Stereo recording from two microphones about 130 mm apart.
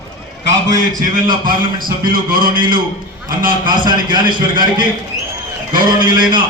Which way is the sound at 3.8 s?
35° right (ahead or behind).